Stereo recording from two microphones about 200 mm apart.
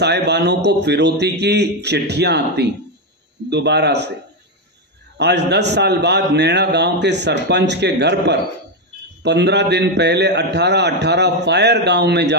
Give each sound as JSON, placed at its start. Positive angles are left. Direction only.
{"t": 0.0, "sound": "a man's voice", "side_deg": -60}
{"t": 5.1, "sound": "a man's voice", "side_deg": -55}